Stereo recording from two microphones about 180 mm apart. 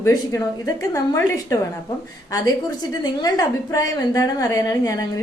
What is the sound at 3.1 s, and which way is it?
A woman's voice, 20° left (ahead or behind).